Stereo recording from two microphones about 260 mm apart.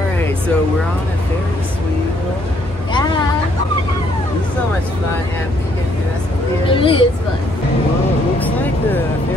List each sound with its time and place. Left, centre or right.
6.7 s speech: centre
8.4 s speech: centre